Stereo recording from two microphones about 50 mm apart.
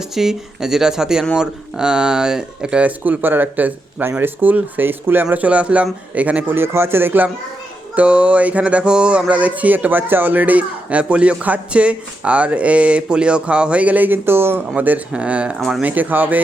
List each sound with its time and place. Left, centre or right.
0.1 s speech: centre
2.8 s speech: right
5.3 s music: right
6.5 s speech: right
7.9 s music: right
14.3 s speech: right
14.8 s speech: right
15.1 s music: right
15.5 s speech: centre
15.8 s speech: right